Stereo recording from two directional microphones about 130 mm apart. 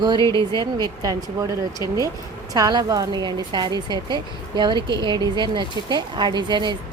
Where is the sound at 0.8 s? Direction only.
30° right (ahead or behind).